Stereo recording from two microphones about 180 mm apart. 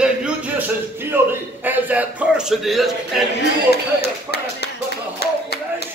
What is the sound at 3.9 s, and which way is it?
Speech, 65° left (ahead or behind).